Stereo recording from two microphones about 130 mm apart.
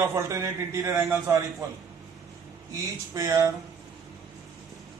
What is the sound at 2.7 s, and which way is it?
Speech, 25° right (ahead or behind).